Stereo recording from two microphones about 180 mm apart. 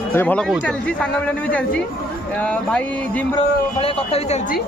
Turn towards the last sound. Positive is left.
turn(degrees=35)  # may be behind; listen again after turning